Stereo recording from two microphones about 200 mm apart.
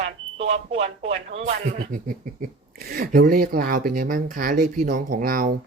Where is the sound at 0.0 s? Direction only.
30° right (ahead or behind).